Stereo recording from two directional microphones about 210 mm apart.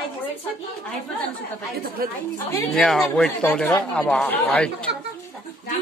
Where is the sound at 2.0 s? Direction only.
45° right (ahead or behind).